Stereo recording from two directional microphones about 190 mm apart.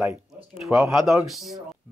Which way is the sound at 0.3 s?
5° right (ahead or behind).